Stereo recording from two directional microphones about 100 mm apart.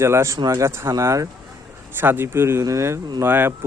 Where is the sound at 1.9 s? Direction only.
20° right (ahead or behind).